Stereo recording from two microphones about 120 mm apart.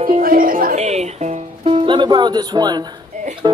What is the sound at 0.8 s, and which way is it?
Music, 70° right (ahead or behind).